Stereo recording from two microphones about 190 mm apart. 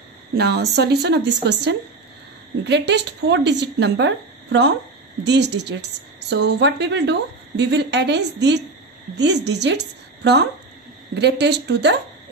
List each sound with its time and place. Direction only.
0.3 s a woman's voice: 60° right (ahead or behind)